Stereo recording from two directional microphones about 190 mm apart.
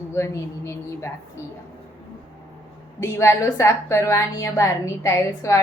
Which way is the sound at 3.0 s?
15° left (ahead or behind).